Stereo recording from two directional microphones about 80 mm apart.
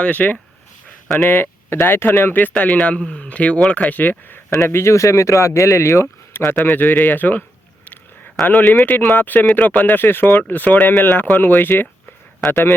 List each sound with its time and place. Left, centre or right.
0.0 s speech: centre
0.9 s a sound: centre
1.3 s speech: left
4.7 s speech: left
8.4 s speech: centre